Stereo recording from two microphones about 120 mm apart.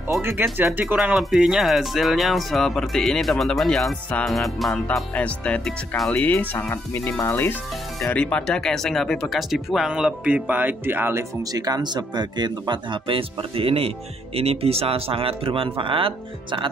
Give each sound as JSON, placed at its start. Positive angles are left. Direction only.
{"t": 0.2, "sound": "speech", "side_deg": -20}
{"t": 11.5, "sound": "speech", "side_deg": -30}